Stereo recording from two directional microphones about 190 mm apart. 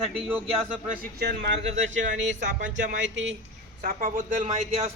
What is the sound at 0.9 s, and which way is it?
Speech, 60° right (ahead or behind).